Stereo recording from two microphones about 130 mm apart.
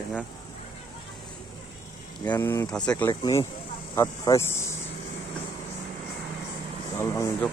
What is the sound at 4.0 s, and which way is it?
Speech, 25° left (ahead or behind).